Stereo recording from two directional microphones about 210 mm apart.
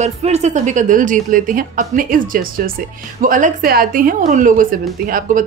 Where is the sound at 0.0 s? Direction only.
30° right (ahead or behind).